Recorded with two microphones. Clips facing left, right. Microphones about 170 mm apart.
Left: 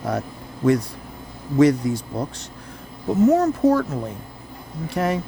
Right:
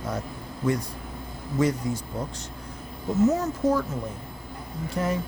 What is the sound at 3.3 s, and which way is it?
Speech, 65° left (ahead or behind).